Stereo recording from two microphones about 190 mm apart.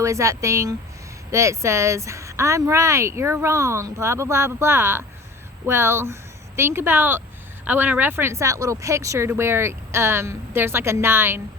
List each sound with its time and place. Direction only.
0.0 s speech: 15° right (ahead or behind)